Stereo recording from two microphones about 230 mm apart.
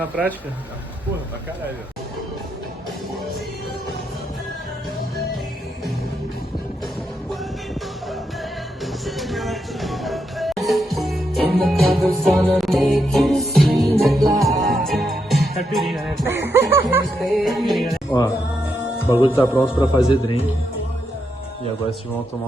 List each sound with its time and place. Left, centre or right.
8.8 s music: centre
16.2 s speech: centre
19.1 s speech: centre